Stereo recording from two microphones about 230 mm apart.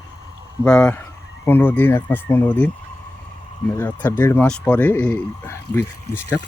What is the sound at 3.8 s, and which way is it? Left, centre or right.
Speech, centre.